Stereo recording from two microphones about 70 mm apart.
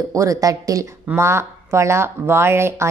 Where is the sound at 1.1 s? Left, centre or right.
Right.